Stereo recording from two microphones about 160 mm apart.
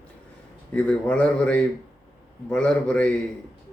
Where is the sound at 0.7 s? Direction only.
5° left (ahead or behind).